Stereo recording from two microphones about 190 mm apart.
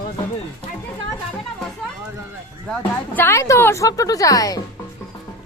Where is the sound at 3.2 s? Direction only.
15° left (ahead or behind).